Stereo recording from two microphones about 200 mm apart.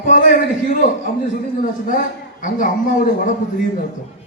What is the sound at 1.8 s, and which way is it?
A man's voice, 40° left (ahead or behind).